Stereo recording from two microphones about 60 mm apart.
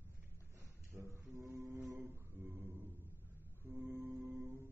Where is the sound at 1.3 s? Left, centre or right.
Right.